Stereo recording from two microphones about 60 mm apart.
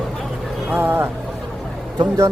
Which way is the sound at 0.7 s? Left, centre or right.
Right.